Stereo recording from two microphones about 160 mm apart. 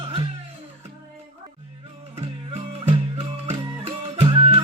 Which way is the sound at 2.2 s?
35° right (ahead or behind).